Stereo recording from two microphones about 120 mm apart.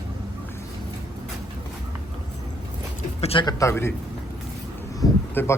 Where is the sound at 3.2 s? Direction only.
55° left (ahead or behind).